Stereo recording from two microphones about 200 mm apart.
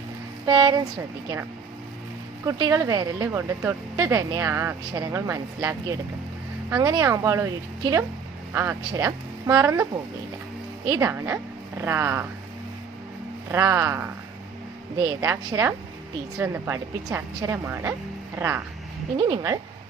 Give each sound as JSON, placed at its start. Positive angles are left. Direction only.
{"t": 0.4, "sound": "speech", "side_deg": -20}
{"t": 2.4, "sound": "speech", "side_deg": -20}
{"t": 6.7, "sound": "speech", "side_deg": -20}
{"t": 10.8, "sound": "speech", "side_deg": -15}
{"t": 13.5, "sound": "speech", "side_deg": -15}
{"t": 19.1, "sound": "speech", "side_deg": -25}